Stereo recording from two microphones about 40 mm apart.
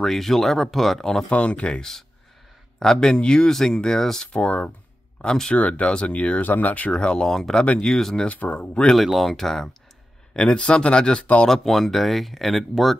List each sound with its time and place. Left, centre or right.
0.0 s speech: centre
1.3 s speech: left
1.8 s speech: centre
4.3 s speech: left
5.2 s speech: centre
5.5 s speech: left
7.0 s speech: left
7.2 s speech: centre
8.3 s speech: left
8.5 s speech: left
8.9 s speech: centre
10.3 s speech: left
11.4 s speech: centre